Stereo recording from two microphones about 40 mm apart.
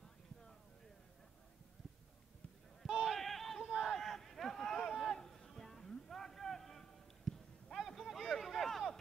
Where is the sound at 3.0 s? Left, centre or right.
Centre.